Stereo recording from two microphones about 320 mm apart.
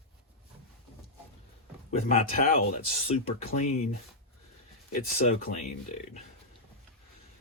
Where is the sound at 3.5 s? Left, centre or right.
Left.